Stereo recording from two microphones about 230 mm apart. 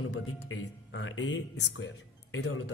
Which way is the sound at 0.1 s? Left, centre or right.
Left.